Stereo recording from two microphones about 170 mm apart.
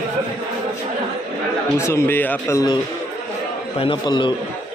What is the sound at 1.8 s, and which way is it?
A man's voice, 15° left (ahead or behind).